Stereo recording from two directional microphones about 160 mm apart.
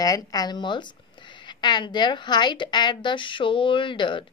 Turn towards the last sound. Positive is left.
turn(degrees=30)  # may be behind; listen again after turning